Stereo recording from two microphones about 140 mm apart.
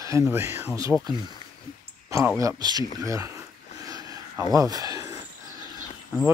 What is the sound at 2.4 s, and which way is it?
Speech, 30° right (ahead or behind).